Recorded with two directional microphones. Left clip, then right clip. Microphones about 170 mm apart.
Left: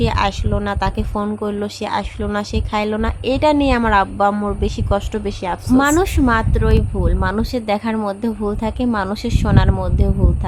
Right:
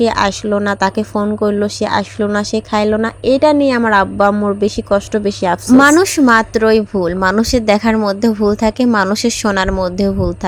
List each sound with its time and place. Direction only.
0.0 s speech: 30° right (ahead or behind)